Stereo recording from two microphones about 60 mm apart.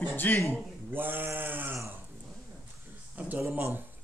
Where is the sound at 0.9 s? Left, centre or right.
Right.